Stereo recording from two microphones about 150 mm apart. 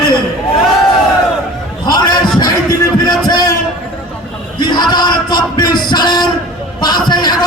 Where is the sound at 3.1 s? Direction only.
25° left (ahead or behind).